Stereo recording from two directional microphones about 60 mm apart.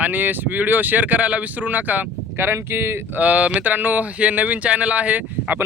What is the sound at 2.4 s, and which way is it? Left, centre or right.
Speech, right.